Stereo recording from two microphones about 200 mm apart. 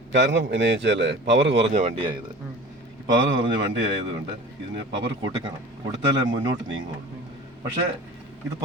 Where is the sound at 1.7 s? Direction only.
35° right (ahead or behind).